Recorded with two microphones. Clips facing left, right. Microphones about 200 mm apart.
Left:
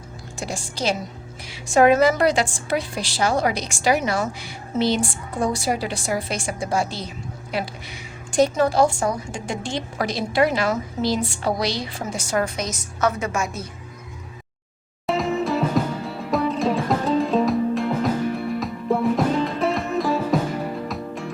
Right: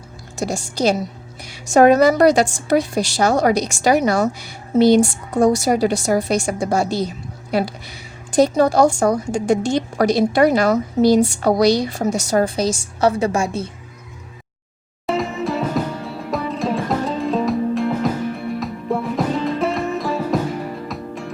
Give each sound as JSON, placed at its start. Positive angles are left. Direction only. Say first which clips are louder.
{"t": 0.3, "sound": "a woman's voice", "louder": "right 7 dB", "side_deg": -40}
{"t": 15.0, "sound": "music", "louder": "right 1 dB", "side_deg": 0}